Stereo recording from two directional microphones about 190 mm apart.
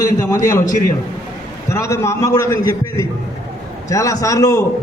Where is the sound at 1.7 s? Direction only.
15° left (ahead or behind).